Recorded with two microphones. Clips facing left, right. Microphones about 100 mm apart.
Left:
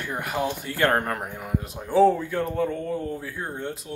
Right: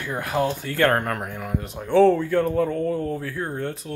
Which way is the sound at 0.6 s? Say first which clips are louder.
Right 2 dB; 20° left (ahead or behind).